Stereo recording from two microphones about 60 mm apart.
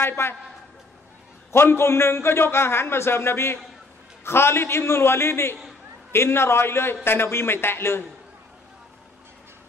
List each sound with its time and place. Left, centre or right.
0.0 s a woman's voice: left
1.5 s a man's voice: left